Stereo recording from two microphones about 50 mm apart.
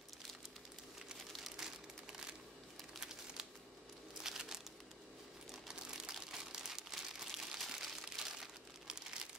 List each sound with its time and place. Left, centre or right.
3.0 s crumpling: centre
4.2 s a sound: centre
5.5 s crumpling: centre